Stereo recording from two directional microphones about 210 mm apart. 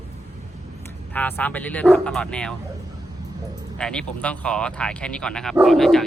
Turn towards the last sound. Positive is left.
turn(degrees=0)  # may be behind; listen again after turning